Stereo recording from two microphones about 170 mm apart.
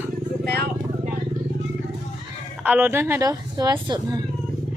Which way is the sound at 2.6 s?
10° right (ahead or behind).